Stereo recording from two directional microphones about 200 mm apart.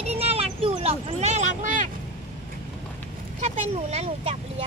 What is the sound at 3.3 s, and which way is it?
Vehicle, 35° right (ahead or behind).